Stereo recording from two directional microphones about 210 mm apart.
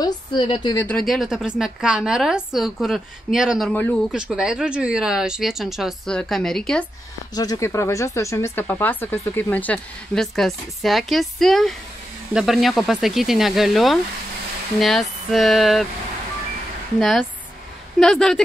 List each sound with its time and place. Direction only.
0.0 s a woman's voice: 20° left (ahead or behind)
0.8 s a woman's voice: centre (ahead or behind)
7.3 s a woman's voice: 15° left (ahead or behind); by 15.9 s centre (ahead or behind)
17.0 s a woman's voice: centre (ahead or behind)